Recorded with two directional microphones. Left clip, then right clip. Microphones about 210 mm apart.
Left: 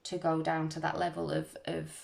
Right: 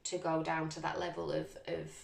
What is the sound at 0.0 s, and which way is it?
Speech, 45° left (ahead or behind).